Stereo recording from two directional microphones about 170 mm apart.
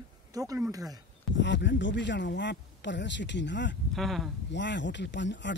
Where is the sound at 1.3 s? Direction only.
90° left.